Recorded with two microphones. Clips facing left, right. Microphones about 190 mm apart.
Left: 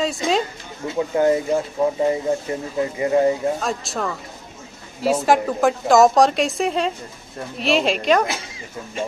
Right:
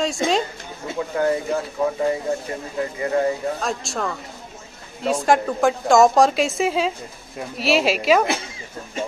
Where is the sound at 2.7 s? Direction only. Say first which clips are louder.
Left 3 dB; 20° left (ahead or behind).